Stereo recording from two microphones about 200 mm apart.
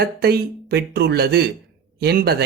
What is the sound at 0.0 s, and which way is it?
Speech, 55° right (ahead or behind).